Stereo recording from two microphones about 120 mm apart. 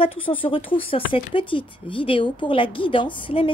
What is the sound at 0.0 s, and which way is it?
Speech, 50° left (ahead or behind).